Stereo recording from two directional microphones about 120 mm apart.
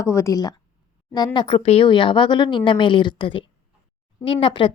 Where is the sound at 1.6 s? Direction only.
55° left (ahead or behind).